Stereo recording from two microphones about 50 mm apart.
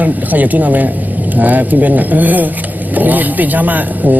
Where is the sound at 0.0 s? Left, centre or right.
Right.